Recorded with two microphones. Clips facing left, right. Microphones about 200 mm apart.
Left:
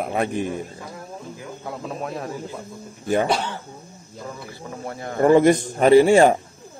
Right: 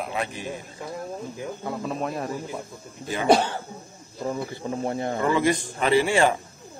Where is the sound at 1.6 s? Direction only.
Centre (ahead or behind).